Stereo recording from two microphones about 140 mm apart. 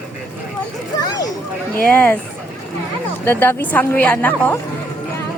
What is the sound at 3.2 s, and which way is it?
Speech, 15° left (ahead or behind).